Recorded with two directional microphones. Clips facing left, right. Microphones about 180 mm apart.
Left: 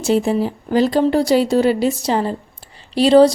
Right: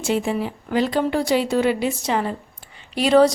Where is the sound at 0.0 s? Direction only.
40° left (ahead or behind).